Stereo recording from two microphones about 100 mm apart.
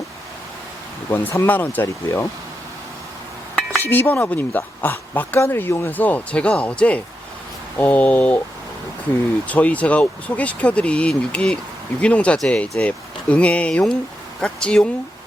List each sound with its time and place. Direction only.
1.1 s speech: 25° left (ahead or behind)
3.8 s speech: 20° left (ahead or behind)
9.5 s speech: 15° left (ahead or behind)